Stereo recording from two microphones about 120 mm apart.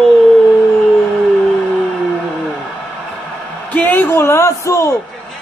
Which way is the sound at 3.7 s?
15° left (ahead or behind).